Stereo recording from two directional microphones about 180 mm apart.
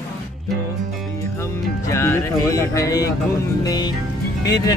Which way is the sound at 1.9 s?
15° left (ahead or behind).